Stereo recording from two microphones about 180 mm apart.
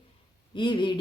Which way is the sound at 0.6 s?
25° left (ahead or behind).